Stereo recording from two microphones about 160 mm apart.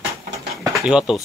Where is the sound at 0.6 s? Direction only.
Centre (ahead or behind).